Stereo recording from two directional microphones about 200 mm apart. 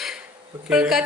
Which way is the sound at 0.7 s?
5° right (ahead or behind).